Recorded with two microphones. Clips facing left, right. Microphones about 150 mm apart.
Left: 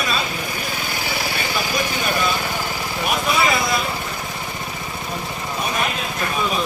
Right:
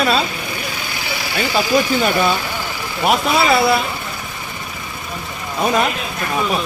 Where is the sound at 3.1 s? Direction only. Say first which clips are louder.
Right 5 dB; 70° right (ahead or behind).